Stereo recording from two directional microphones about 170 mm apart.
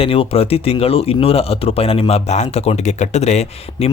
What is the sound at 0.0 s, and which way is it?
Speech, 35° left (ahead or behind).